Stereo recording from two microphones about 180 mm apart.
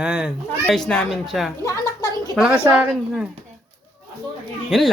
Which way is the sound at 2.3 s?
5° right (ahead or behind).